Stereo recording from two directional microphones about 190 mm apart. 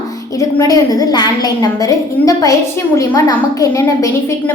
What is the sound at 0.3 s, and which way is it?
A woman's voice, 20° left (ahead or behind).